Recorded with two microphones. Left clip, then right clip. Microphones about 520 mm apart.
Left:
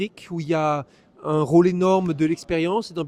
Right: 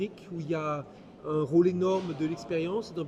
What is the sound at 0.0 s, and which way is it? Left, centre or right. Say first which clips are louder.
Speech: left 6 dB; left.